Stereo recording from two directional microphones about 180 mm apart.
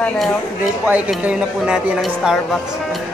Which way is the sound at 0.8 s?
10° right (ahead or behind).